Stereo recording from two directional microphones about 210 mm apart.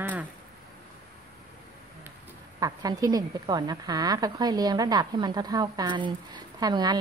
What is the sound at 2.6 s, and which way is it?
A woman's voice, 15° right (ahead or behind).